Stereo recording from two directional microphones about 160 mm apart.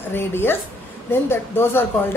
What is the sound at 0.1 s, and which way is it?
Speech, 15° left (ahead or behind).